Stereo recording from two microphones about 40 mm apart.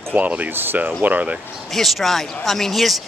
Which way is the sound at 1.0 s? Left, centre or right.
Right.